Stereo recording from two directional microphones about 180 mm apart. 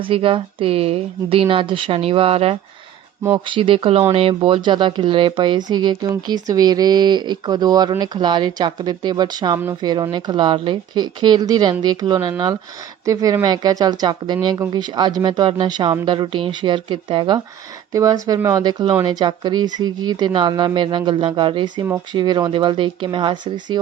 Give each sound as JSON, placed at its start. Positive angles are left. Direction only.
{"t": 0.0, "sound": "speech", "side_deg": -30}